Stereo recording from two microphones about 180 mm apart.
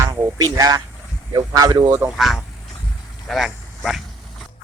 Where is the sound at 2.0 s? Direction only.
Centre (ahead or behind).